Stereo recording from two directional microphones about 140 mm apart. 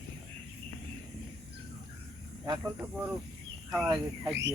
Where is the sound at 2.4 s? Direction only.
20° right (ahead or behind).